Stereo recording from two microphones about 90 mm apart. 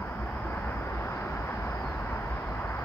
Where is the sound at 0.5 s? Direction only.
25° left (ahead or behind).